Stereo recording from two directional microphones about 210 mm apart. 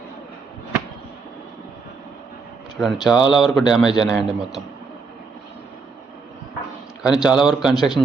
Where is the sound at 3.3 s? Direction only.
Centre (ahead or behind).